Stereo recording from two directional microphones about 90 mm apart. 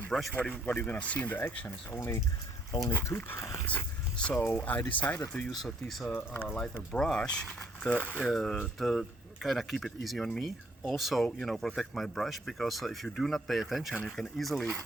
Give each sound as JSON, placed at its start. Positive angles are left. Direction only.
{"t": 0.1, "sound": "speech", "side_deg": 0}
{"t": 0.4, "sound": "speech", "side_deg": 15}
{"t": 4.2, "sound": "speech", "side_deg": 20}
{"t": 5.5, "sound": "speech", "side_deg": 0}
{"t": 6.1, "sound": "speech", "side_deg": 25}
{"t": 6.9, "sound": "speech", "side_deg": 10}